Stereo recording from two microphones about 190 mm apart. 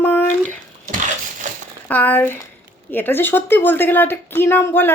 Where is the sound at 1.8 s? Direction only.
10° left (ahead or behind).